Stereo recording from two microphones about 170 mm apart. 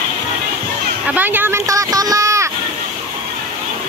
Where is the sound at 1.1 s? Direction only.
10° right (ahead or behind).